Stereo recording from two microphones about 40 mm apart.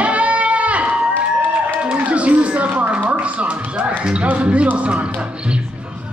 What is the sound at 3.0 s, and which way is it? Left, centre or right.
Music, right.